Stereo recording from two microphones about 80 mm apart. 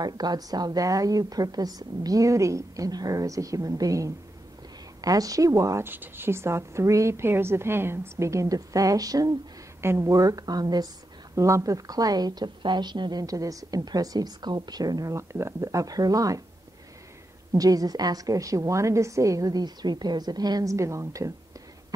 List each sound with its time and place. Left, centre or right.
0.0 s a woman's voice: right
5.9 s a woman's voice: right
9.8 s a woman's voice: right
11.3 s a woman's voice: right
13.2 s a woman's voice: right
17.5 s a woman's voice: right
20.7 s a woman's voice: right